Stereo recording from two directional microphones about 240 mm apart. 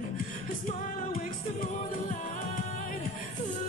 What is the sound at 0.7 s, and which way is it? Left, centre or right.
Music, left.